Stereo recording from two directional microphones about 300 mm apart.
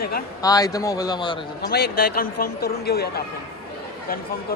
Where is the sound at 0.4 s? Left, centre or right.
Centre.